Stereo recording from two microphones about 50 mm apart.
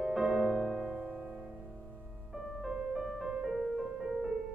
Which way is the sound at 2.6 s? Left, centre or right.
Centre.